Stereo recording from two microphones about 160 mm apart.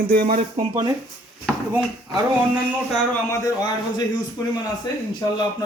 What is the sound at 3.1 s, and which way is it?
Speech, 20° left (ahead or behind).